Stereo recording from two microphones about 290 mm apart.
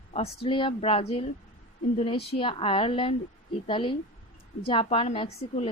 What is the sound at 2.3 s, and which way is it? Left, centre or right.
A woman's voice, centre.